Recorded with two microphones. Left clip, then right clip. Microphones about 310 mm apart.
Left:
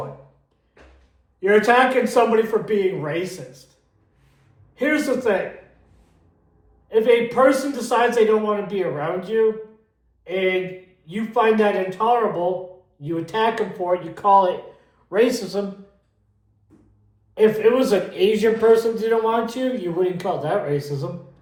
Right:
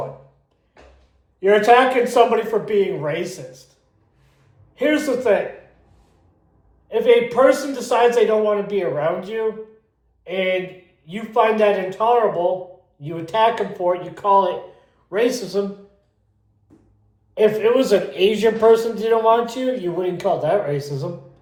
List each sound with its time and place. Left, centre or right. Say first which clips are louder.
1.4 s a man's voice: right 2 dB; centre
4.7 s a man's voice: right 2 dB; centre
6.8 s a man's voice: right 2 dB; centre
17.3 s a man's voice: right 1 dB; centre